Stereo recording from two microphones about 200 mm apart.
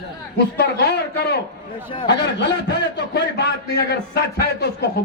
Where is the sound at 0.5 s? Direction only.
55° left (ahead or behind).